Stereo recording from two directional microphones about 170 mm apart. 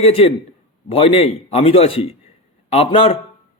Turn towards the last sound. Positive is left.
turn(degrees=35)  # may be behind; listen again after turning